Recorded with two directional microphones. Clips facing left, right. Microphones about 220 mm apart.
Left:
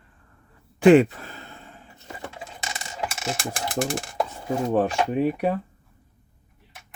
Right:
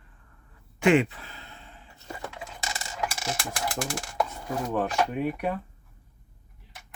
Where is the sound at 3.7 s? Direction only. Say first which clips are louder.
Left 7 dB; 25° left (ahead or behind).